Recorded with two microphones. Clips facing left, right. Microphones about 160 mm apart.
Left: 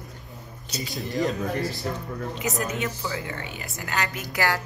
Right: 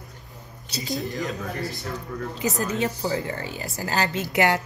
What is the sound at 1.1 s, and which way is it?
Speech, 40° left (ahead or behind).